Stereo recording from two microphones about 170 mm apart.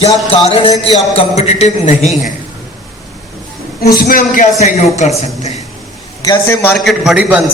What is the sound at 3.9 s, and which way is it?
A man's voice, 55° left (ahead or behind).